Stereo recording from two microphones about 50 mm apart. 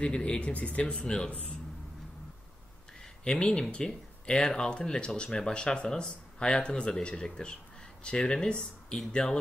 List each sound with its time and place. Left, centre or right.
0.0 s speech: centre
1.0 s speech: centre
3.3 s speech: centre